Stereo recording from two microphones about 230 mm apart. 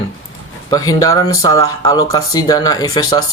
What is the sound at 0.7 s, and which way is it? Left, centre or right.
Speech, centre.